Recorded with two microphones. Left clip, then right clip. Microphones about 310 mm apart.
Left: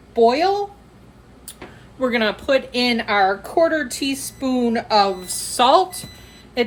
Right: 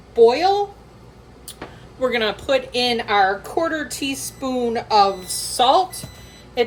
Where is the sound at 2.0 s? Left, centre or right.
Left.